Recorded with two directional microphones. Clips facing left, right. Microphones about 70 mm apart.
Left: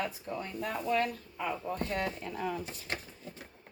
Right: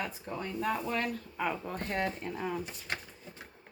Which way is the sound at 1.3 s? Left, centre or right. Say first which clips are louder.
Even; right.